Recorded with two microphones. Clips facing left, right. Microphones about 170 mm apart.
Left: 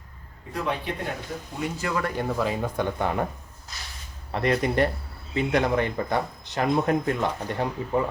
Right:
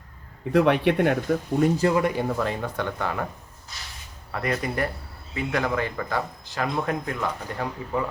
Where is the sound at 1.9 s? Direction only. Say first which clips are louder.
Right 5 dB; 20° right (ahead or behind).